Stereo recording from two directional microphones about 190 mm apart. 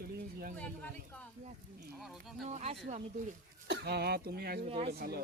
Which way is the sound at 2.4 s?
35° right (ahead or behind).